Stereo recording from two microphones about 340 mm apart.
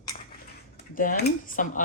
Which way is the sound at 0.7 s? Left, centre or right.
Left.